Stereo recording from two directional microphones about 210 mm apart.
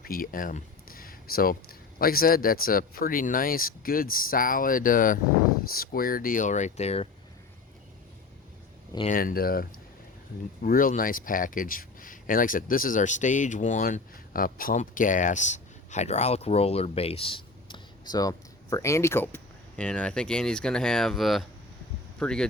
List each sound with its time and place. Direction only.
0.0 s a sound: 45° left (ahead or behind)
2.0 s speech: 45° left (ahead or behind)
9.0 s speech: 40° left (ahead or behind); by 22.4 s 5° left (ahead or behind)